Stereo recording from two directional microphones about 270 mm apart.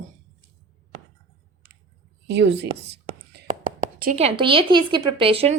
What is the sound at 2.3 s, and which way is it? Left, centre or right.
Speech, right.